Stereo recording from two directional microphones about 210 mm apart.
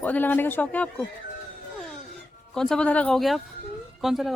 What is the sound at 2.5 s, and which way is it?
Speech, 5° left (ahead or behind).